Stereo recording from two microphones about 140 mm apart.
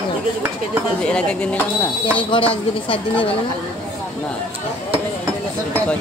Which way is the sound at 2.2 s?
35° left (ahead or behind).